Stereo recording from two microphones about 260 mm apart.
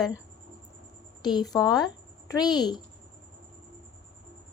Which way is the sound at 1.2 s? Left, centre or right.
Centre.